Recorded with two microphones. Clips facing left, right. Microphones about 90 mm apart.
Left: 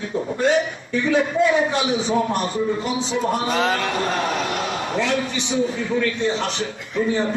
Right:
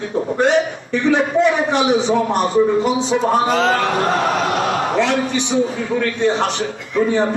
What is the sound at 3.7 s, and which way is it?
A man's voice, 65° right (ahead or behind).